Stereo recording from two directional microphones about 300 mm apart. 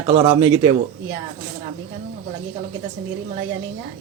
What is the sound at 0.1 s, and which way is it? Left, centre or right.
Speech, centre.